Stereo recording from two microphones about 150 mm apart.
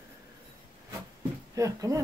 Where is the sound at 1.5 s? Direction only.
20° right (ahead or behind).